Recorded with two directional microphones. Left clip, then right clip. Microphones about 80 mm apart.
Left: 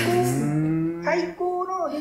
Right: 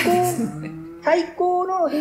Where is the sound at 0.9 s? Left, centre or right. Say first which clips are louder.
Right 5 dB; centre.